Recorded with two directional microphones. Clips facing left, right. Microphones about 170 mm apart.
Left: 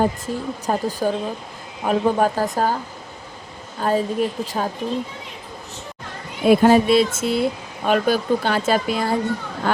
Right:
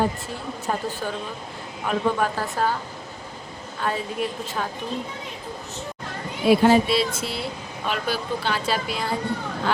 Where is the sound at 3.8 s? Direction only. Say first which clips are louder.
Left 6 dB; 40° left (ahead or behind).